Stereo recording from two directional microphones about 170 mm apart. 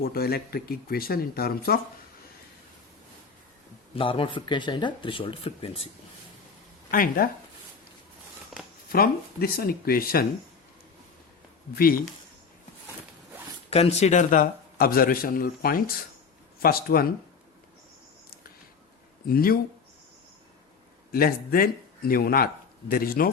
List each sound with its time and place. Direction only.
0.0 s a man's voice: 65° left (ahead or behind)
3.9 s speech: 30° left (ahead or behind)
6.9 s a man's voice: 55° left (ahead or behind)
8.9 s a man's voice: 65° left (ahead or behind)
11.7 s a man's voice: 60° left (ahead or behind)
13.7 s a man's voice: 35° left (ahead or behind); by 17.1 s 60° left (ahead or behind)
19.3 s a man's voice: 60° left (ahead or behind)
21.1 s a man's voice: 60° left (ahead or behind)